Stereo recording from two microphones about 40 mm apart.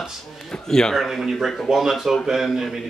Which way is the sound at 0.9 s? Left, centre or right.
Centre.